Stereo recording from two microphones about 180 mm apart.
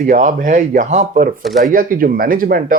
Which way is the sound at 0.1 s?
45° right (ahead or behind).